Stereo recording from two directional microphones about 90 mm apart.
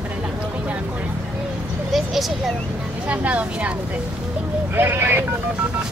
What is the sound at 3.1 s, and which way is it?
Speech, 15° right (ahead or behind).